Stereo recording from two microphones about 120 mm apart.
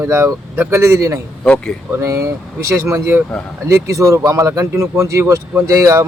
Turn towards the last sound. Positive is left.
turn(degrees=-25)  # may be behind; listen again after turning